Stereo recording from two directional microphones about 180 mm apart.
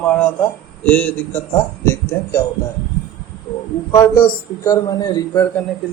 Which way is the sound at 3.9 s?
15° left (ahead or behind).